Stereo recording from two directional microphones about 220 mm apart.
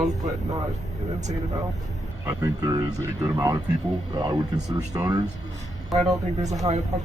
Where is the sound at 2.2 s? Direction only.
15° right (ahead or behind).